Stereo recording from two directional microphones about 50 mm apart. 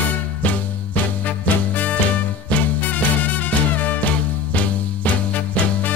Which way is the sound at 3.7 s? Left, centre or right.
Left.